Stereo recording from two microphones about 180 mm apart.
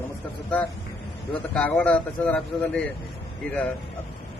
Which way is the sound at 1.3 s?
10° left (ahead or behind).